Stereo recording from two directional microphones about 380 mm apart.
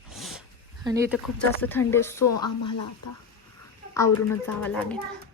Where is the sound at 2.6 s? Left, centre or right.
Left.